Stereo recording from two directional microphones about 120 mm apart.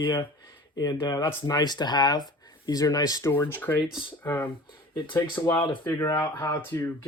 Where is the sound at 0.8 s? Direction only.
35° left (ahead or behind).